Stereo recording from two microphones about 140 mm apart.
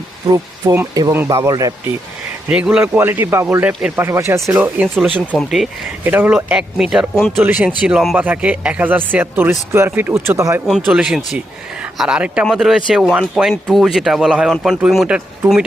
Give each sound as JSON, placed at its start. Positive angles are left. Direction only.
{"t": 0.3, "sound": "speech", "side_deg": -20}
{"t": 2.5, "sound": "speech", "side_deg": -5}
{"t": 4.9, "sound": "speech", "side_deg": 5}
{"t": 6.1, "sound": "speech", "side_deg": -15}
{"t": 10.7, "sound": "speech", "side_deg": -5}